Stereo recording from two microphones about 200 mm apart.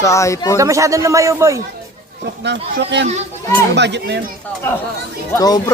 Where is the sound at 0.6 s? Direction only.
15° right (ahead or behind).